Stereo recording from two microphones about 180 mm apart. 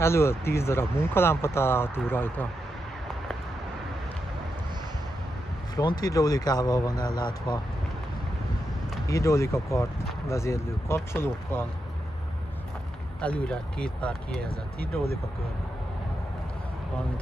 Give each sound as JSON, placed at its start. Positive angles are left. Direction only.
{"t": 0.0, "sound": "speech", "side_deg": 15}
{"t": 5.8, "sound": "speech", "side_deg": 20}
{"t": 9.1, "sound": "speech", "side_deg": 15}
{"t": 13.2, "sound": "speech", "side_deg": 5}